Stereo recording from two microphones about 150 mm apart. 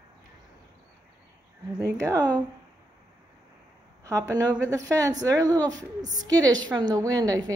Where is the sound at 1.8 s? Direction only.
20° right (ahead or behind).